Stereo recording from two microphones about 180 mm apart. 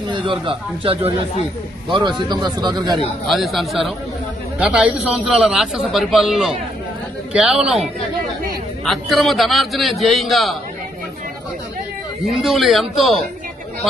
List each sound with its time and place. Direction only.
0.1 s a man's voice: 30° right (ahead or behind)
3.2 s a man's voice: centre (ahead or behind)
12.2 s a man's voice: centre (ahead or behind)